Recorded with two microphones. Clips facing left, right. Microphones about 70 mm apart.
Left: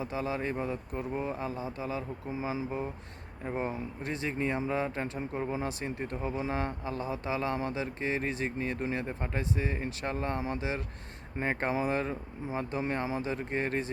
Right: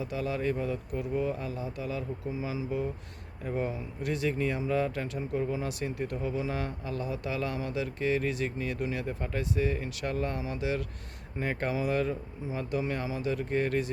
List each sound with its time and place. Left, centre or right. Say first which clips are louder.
0.0 s speech: right 2 dB; left